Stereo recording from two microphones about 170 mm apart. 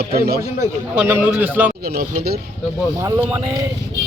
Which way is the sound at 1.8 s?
65° right (ahead or behind).